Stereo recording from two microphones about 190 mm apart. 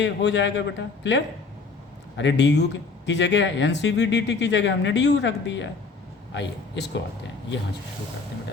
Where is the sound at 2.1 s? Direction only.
70° left (ahead or behind).